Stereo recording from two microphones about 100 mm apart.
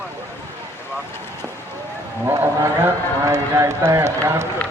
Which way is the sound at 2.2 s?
20° right (ahead or behind).